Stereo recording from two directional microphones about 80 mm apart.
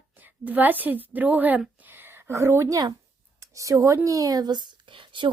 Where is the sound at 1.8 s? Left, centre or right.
Right.